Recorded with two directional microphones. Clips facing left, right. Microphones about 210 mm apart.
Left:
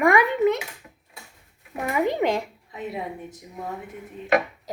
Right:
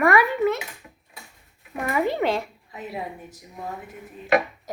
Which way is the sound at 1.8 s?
15° left (ahead or behind).